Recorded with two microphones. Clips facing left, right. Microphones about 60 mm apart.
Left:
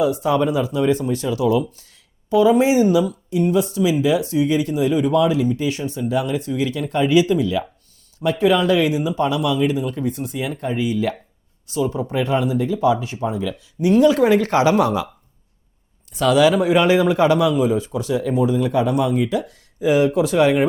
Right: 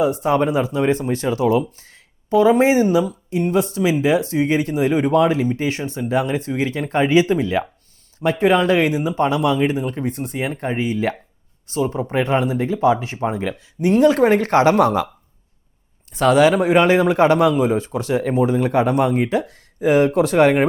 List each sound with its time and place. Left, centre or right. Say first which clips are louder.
0.0 s speech: right 1 dB; right
16.1 s speech: right 1 dB; right